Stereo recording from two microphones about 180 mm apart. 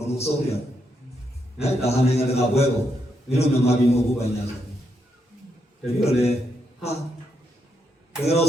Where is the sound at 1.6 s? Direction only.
35° left (ahead or behind).